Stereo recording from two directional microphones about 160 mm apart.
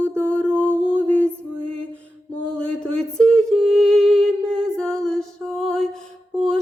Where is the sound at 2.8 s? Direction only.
5° left (ahead or behind).